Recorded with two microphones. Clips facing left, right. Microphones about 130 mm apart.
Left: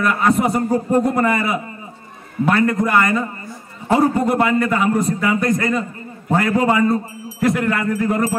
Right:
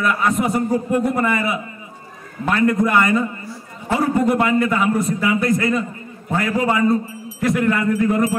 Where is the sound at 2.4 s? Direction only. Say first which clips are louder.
Even; centre (ahead or behind).